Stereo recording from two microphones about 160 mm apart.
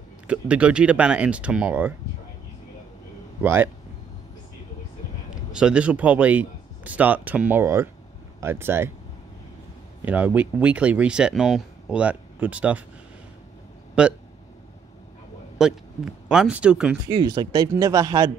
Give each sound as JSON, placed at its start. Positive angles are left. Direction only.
{"t": 0.3, "sound": "speech", "side_deg": -10}
{"t": 3.4, "sound": "speech", "side_deg": -15}
{"t": 5.5, "sound": "speech", "side_deg": -5}
{"t": 10.0, "sound": "speech", "side_deg": -10}
{"t": 14.0, "sound": "speech", "side_deg": -5}
{"t": 15.5, "sound": "speech", "side_deg": -5}
{"t": 17.1, "sound": "speech", "side_deg": -25}